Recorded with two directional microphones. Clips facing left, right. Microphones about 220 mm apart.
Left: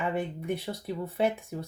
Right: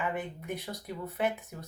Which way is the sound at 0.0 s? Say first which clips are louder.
Left 4 dB; 30° left (ahead or behind).